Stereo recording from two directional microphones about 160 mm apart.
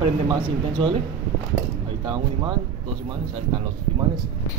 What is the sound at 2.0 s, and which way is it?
Speech, 30° right (ahead or behind).